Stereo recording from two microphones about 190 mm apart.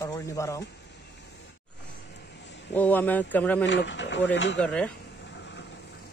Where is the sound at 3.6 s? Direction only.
70° left (ahead or behind).